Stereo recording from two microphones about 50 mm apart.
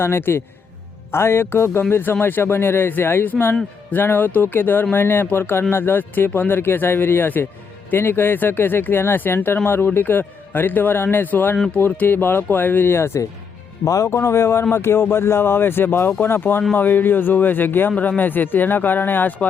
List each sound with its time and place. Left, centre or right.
0.0 s speech: left
1.8 s speech: left
13.8 s speech: left